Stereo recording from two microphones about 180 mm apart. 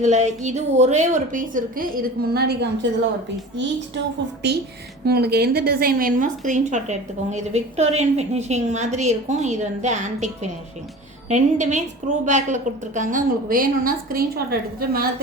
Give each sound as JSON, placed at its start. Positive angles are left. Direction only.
{"t": 0.0, "sound": "a woman's voice", "side_deg": -40}
{"t": 4.4, "sound": "a woman's voice", "side_deg": -70}